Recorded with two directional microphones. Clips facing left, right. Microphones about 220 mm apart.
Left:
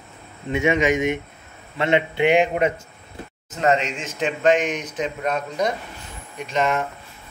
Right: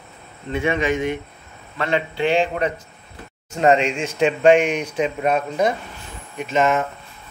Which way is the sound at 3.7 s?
10° right (ahead or behind).